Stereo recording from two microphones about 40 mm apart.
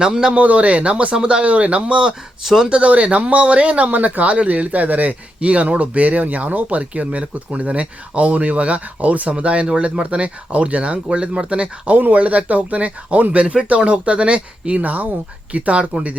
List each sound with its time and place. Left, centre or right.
0.0 s a man's voice: centre
0.3 s speech: right
3.9 s speech: right
11.9 s speech: right